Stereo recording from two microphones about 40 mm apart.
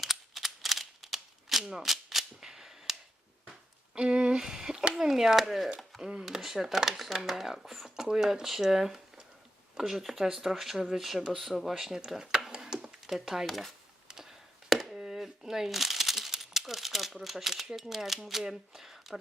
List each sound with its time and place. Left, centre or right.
0.0 s a sound: centre
3.9 s speech: right
12.5 s a sound: centre
13.1 s speech: centre
13.5 s speech: centre
14.1 s chop: centre
14.9 s chopping: centre
15.2 s crumpling: centre
18.3 s speech: centre